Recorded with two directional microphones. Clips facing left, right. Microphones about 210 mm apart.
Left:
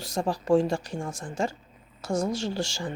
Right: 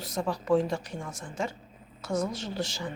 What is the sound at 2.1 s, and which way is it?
Speech, 30° left (ahead or behind).